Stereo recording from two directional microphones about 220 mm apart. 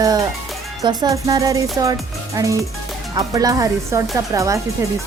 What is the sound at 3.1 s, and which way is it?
Speech, 15° right (ahead or behind).